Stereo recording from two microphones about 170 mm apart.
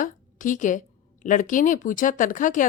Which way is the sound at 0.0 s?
50° left (ahead or behind).